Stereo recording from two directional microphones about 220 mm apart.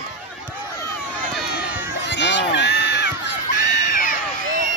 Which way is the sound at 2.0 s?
55° left (ahead or behind).